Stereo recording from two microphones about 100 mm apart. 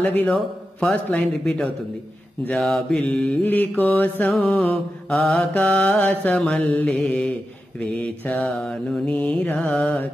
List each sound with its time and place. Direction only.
0.0 s mantra: 15° left (ahead or behind)